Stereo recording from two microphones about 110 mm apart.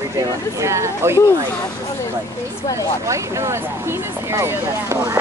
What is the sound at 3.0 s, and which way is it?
Speech, 25° right (ahead or behind).